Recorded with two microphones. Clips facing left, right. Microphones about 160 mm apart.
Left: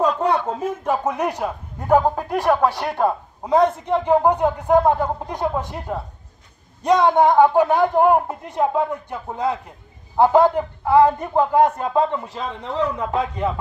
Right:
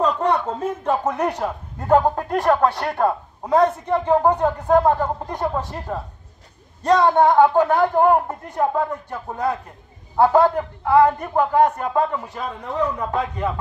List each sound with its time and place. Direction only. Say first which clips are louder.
0.0 s a man's voice: left 1 dB; 10° left (ahead or behind)